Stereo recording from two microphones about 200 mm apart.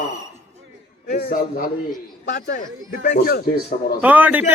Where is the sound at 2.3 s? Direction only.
60° left (ahead or behind).